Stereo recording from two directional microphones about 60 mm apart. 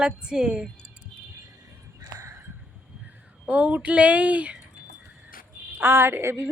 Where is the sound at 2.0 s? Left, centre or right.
Right.